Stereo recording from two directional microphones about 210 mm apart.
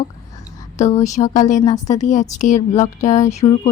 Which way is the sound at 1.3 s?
35° left (ahead or behind).